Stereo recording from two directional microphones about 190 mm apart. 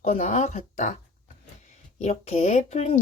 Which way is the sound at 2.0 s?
35° left (ahead or behind).